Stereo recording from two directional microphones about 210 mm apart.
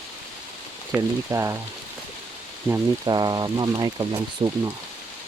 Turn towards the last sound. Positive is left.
turn(degrees=-25)  # may be behind; listen again after turning